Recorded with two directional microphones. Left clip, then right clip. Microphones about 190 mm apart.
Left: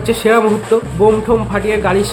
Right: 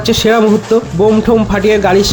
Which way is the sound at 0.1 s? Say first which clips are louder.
Right 2 dB; 35° right (ahead or behind).